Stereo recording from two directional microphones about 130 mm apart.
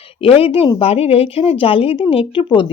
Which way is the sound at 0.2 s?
45° left (ahead or behind).